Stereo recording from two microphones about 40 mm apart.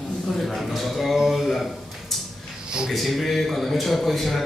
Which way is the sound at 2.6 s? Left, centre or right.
Centre.